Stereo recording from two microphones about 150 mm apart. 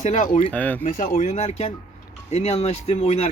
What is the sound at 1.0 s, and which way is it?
Speech, 60° left (ahead or behind).